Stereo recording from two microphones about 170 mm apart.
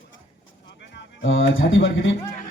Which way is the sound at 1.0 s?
90° left.